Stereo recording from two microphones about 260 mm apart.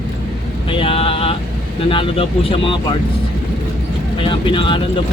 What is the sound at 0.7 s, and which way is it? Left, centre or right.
Vehicle, left.